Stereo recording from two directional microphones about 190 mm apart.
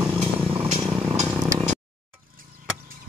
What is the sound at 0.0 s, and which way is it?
Vehicle, 10° right (ahead or behind).